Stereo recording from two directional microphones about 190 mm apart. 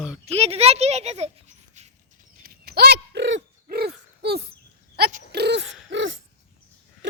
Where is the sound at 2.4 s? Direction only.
55° right (ahead or behind).